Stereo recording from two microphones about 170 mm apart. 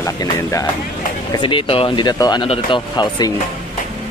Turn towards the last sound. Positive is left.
turn(degrees=25)  # may be behind; listen again after turning